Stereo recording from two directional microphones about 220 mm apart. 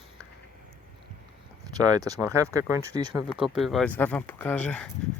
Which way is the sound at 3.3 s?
Centre (ahead or behind).